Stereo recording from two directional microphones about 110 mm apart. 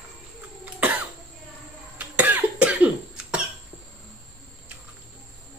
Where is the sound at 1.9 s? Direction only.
15° right (ahead or behind).